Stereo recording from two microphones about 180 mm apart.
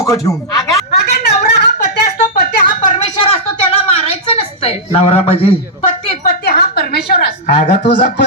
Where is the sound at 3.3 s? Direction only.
30° left (ahead or behind).